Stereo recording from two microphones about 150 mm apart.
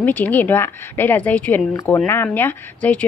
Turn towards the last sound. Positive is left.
turn(degrees=10)  # may be behind; listen again after turning